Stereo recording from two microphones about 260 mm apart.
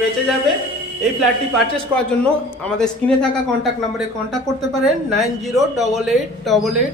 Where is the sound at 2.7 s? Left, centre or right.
Centre.